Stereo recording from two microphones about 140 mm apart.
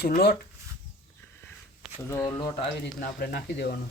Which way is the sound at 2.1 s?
20° left (ahead or behind).